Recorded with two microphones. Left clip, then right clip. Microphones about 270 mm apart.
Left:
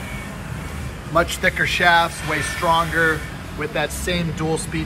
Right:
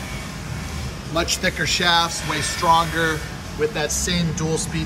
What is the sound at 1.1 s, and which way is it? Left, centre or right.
A man's voice, centre.